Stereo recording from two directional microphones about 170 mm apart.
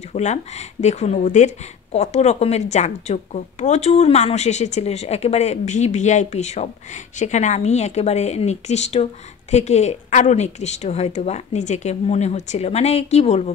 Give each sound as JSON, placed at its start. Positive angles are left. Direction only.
{"t": 0.1, "sound": "speech", "side_deg": 40}